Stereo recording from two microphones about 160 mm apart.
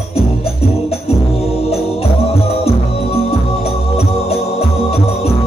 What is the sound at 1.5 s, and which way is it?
Music, 40° left (ahead or behind).